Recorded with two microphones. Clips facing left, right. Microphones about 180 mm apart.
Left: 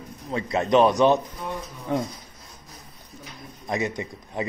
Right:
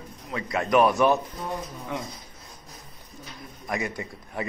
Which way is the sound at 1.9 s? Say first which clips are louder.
Left 8 dB; 35° left (ahead or behind).